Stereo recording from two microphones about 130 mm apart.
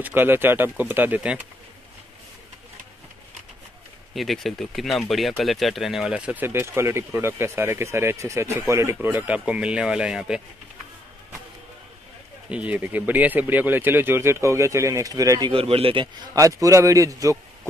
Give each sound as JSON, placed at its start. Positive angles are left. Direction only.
{"t": 0.0, "sound": "speech", "side_deg": -15}
{"t": 4.1, "sound": "speech", "side_deg": 0}
{"t": 9.1, "sound": "speech", "side_deg": -10}
{"t": 12.4, "sound": "speech", "side_deg": -10}
{"t": 15.5, "sound": "speech", "side_deg": -45}
{"t": 16.3, "sound": "a man's voice", "side_deg": -25}